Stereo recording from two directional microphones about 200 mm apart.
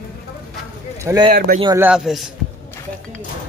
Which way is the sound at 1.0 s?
20° right (ahead or behind).